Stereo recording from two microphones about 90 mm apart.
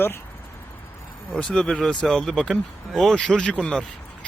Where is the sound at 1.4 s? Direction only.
10° left (ahead or behind).